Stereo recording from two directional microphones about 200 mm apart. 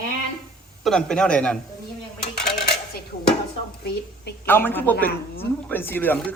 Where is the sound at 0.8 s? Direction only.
5° left (ahead or behind).